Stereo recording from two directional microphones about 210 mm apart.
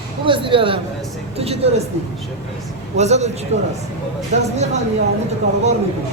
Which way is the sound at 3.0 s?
30° right (ahead or behind).